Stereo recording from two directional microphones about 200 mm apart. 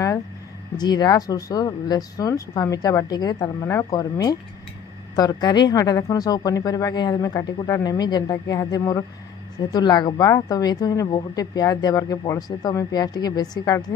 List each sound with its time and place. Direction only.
0.7 s a woman's voice: 20° left (ahead or behind)